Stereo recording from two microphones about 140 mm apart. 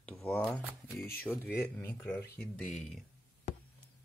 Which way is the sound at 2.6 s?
5° left (ahead or behind).